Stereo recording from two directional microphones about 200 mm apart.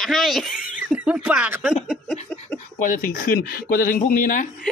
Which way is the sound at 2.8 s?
40° left (ahead or behind).